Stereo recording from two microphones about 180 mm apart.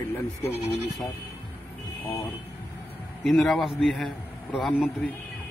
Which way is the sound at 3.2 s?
Centre (ahead or behind).